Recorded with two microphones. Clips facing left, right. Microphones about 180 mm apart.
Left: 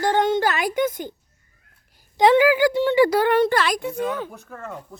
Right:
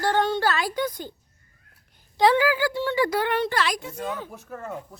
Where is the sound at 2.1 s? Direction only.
20° left (ahead or behind).